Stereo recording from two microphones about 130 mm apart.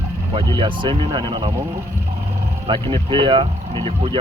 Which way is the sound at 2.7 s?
40° right (ahead or behind).